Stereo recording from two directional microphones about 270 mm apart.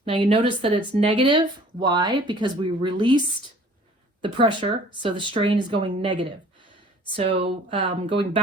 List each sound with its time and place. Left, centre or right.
0.0 s speech: centre
4.2 s speech: centre
7.4 s speech: centre